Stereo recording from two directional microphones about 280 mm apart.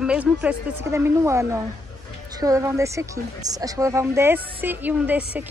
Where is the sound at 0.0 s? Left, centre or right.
Centre.